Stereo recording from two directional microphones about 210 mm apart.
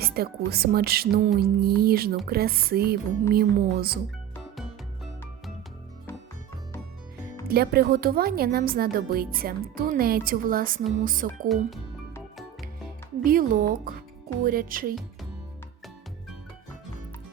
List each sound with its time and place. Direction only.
0.0 s speech: 45° right (ahead or behind)
7.4 s speech: 45° right (ahead or behind)
11.4 s speech: centre (ahead or behind)
13.2 s speech: 40° right (ahead or behind)